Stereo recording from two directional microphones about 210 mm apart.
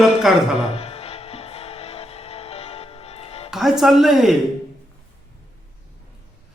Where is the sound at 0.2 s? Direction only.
Centre (ahead or behind).